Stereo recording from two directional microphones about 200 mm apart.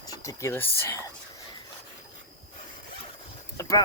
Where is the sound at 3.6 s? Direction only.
15° left (ahead or behind).